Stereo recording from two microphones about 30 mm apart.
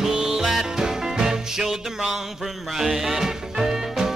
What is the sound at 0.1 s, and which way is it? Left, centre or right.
Music, right.